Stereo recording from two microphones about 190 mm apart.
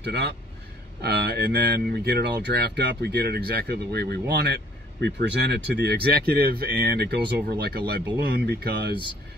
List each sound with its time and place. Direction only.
0.0 s speech: 60° right (ahead or behind)